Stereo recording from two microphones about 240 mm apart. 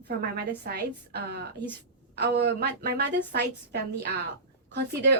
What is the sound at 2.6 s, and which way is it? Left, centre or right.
A woman's voice, right.